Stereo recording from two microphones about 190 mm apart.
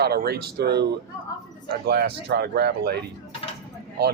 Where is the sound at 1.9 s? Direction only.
60° right (ahead or behind).